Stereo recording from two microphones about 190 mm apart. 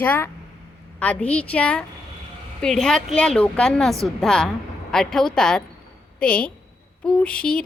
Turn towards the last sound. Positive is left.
turn(degrees=5)  # may be behind; listen again after turning